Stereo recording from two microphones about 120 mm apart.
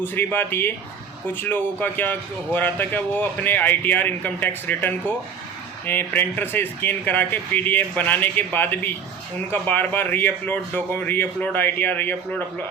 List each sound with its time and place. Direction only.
0.0 s speech: 15° left (ahead or behind)